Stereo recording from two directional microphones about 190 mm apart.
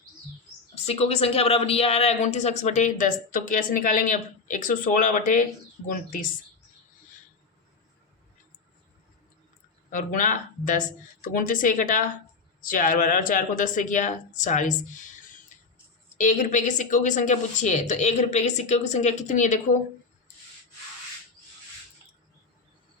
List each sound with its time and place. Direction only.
0.9 s speech: 35° left (ahead or behind)
9.9 s speech: 45° left (ahead or behind)
16.1 s speech: 40° left (ahead or behind)